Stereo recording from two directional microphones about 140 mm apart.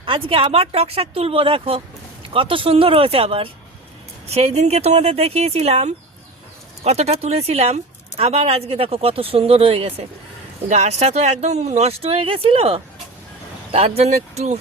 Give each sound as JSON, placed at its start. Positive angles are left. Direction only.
{"t": 0.0, "sound": "speech", "side_deg": -40}